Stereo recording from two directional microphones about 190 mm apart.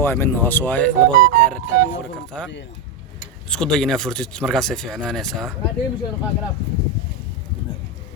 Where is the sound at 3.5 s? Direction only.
5° left (ahead or behind).